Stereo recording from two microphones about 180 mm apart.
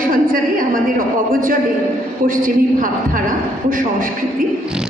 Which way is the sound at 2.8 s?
50° right (ahead or behind).